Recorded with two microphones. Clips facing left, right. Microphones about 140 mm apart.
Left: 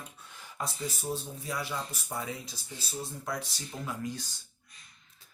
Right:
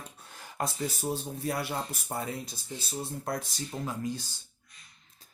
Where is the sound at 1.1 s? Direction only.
60° right (ahead or behind).